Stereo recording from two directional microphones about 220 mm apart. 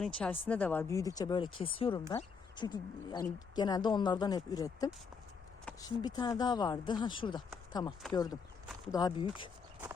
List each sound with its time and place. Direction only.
0.0 s speech: 5° left (ahead or behind)
5.7 s a sound: 5° left (ahead or behind)
6.0 s speech: 20° left (ahead or behind)